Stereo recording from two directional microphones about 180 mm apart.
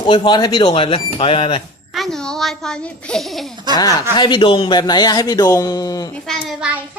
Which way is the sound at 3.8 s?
20° left (ahead or behind).